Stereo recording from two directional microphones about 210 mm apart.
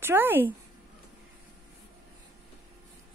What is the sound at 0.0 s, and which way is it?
Speech, 10° right (ahead or behind).